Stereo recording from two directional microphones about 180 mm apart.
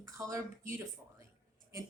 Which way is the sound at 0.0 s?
15° right (ahead or behind).